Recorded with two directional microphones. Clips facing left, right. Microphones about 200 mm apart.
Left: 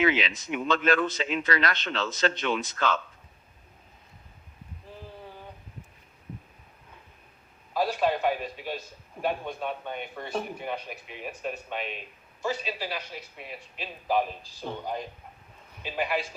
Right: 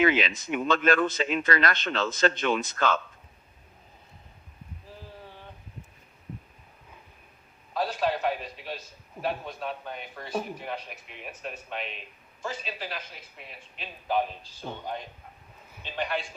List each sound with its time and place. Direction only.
0.0 s speech: 50° right (ahead or behind)
8.0 s a man's voice: centre (ahead or behind)